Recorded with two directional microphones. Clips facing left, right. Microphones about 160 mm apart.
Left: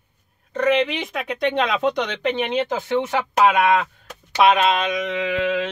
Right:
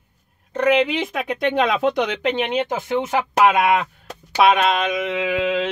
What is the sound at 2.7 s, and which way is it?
Speech, 15° right (ahead or behind).